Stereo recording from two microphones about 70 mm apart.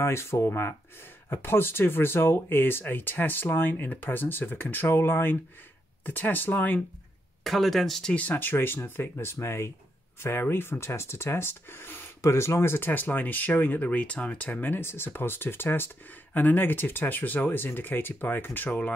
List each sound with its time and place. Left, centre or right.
0.0 s speech: left
7.4 s speech: centre
8.1 s speech: left